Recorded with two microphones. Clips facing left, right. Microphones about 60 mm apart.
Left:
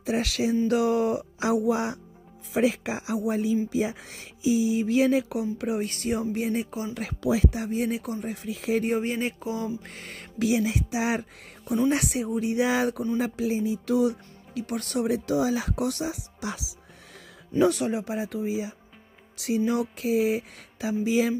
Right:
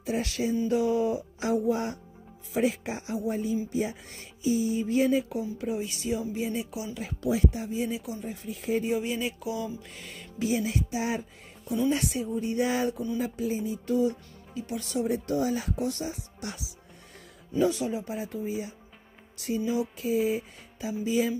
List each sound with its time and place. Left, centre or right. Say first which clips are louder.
0.0 s speech: left 3 dB; left
0.7 s speech: left 1 dB; left
5.9 s speech: left 3 dB; left
6.9 s speech: left 2 dB; left
8.9 s a sound: left 2 dB; left
9.8 s a sound: left 3 dB; left
10.4 s speech: left 3 dB; left
17.6 s speech: left 3 dB; left